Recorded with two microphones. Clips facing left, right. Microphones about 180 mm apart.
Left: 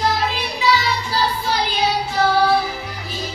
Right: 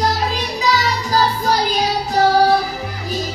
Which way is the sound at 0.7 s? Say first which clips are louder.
Right 3 dB; 40° right (ahead or behind).